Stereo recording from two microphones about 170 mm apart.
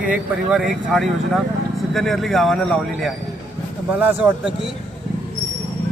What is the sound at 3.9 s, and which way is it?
Speech, 10° right (ahead or behind).